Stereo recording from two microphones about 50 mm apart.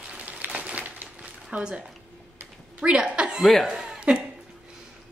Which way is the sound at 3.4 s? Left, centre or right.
Centre.